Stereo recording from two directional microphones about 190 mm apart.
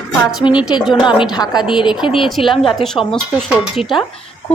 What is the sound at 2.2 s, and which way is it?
Speech, centre (ahead or behind).